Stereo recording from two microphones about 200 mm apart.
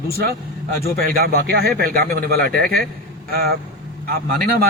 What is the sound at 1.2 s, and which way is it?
A man's voice, 55° right (ahead or behind).